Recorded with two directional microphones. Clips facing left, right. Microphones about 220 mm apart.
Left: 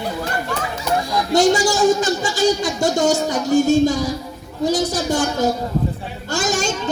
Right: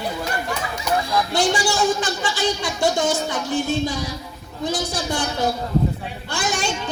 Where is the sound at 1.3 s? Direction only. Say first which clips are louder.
Left 7 dB; 45° left (ahead or behind).